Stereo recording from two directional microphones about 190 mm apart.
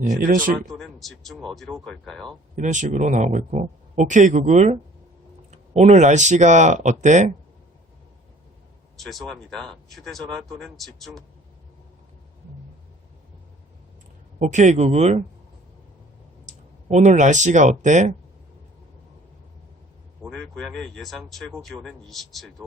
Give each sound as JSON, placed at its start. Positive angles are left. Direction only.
{"t": 0.0, "sound": "speech", "side_deg": -45}
{"t": 0.6, "sound": "speech", "side_deg": 0}
{"t": 2.6, "sound": "speech", "side_deg": -40}
{"t": 9.0, "sound": "speech", "side_deg": 0}
{"t": 14.3, "sound": "speech", "side_deg": -40}
{"t": 16.5, "sound": "speech", "side_deg": -40}
{"t": 20.2, "sound": "speech", "side_deg": 5}